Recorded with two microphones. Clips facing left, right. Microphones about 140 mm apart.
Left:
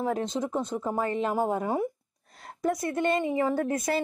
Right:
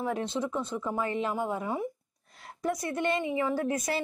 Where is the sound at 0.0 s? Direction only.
40° left (ahead or behind).